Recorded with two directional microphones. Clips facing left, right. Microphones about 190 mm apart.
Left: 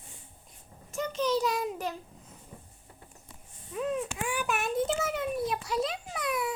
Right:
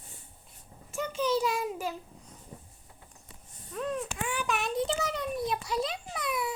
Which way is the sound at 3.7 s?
5° left (ahead or behind).